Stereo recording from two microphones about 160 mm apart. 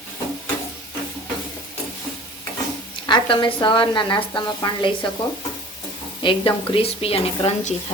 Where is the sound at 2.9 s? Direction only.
30° left (ahead or behind).